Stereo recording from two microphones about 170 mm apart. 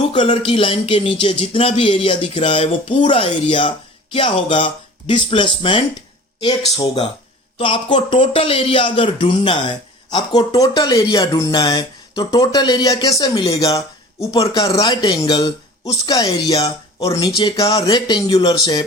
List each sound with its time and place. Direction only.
0.1 s speech: 30° left (ahead or behind)